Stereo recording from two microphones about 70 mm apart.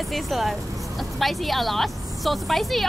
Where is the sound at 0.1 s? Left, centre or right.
Centre.